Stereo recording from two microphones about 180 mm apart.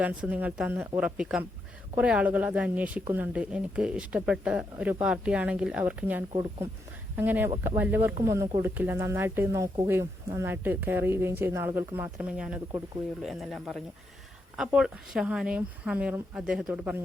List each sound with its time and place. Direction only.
0.0 s speech: 5° right (ahead or behind)
6.3 s speech: 25° right (ahead or behind)
7.2 s speech: 10° right (ahead or behind)